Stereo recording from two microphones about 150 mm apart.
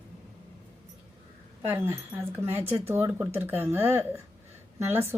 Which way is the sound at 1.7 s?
15° right (ahead or behind).